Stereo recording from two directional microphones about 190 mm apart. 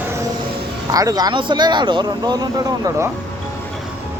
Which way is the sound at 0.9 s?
20° right (ahead or behind).